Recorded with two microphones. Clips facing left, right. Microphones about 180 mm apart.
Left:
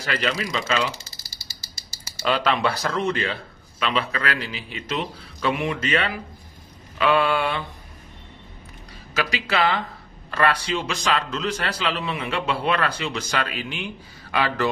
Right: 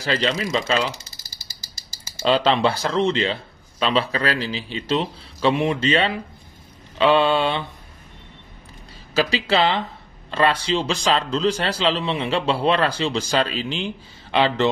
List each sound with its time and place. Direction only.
0.0 s a man's voice: 25° right (ahead or behind)
1.6 s frog: 90° right
2.2 s a man's voice: 30° right (ahead or behind)
9.1 s a man's voice: 30° right (ahead or behind)